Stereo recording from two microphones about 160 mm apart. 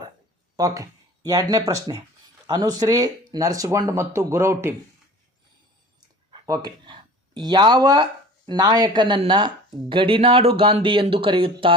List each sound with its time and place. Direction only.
0.5 s speech: 20° right (ahead or behind)
6.3 s speech: 25° right (ahead or behind)